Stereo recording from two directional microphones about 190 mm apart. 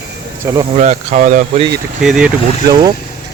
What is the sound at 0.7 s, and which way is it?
Speech, 35° right (ahead or behind).